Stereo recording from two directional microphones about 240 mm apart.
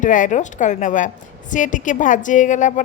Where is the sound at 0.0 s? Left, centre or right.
Left.